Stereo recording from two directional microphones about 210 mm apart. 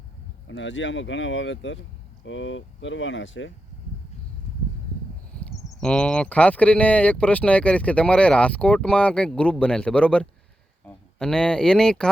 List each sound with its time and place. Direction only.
0.4 s speech: 60° left (ahead or behind)
5.8 s speech: 5° left (ahead or behind)